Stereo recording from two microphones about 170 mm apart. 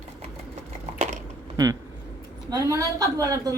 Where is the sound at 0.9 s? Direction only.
40° right (ahead or behind).